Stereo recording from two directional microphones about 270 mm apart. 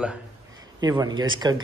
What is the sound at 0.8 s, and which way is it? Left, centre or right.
Speech, centre.